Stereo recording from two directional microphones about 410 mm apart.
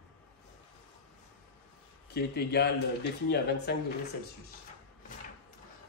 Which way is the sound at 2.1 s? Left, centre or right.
Left.